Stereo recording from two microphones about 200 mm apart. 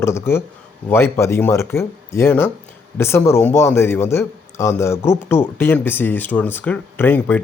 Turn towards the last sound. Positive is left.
turn(degrees=10)  # may be behind; listen again after turning